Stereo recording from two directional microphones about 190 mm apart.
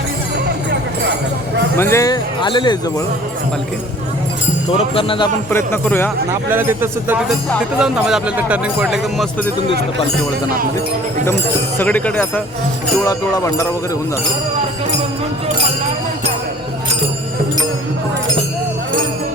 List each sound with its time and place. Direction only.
1.7 s speech: 15° left (ahead or behind)
4.8 s speech: 30° left (ahead or behind)
5.5 s speech: 10° left (ahead or behind)
6.5 s speech: 10° right (ahead or behind)
11.8 s speech: 5° left (ahead or behind)
13.1 s speech: 20° left (ahead or behind)